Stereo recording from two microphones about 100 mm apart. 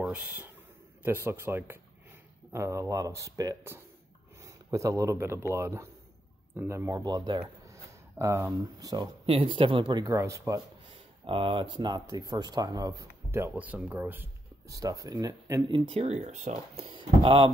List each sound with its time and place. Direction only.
0.0 s a man's voice: 15° right (ahead or behind); by 7.4 s 45° right (ahead or behind)
7.6 s speech: 30° right (ahead or behind)
9.2 s speech: 65° right (ahead or behind)
10.0 s speech: 30° right (ahead or behind)
10.9 s speech: 60° right (ahead or behind); by 13.1 s 40° right (ahead or behind)
13.3 s speech: 20° right (ahead or behind)
14.7 s speech: 35° right (ahead or behind)
15.7 s speech: 80° right
16.7 s speech: 65° right (ahead or behind)